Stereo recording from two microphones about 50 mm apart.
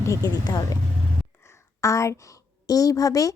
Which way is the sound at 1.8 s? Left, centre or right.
Left.